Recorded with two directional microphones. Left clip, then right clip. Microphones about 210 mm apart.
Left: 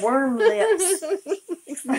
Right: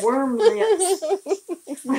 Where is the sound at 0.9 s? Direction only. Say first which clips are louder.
Right 3 dB; 5° right (ahead or behind).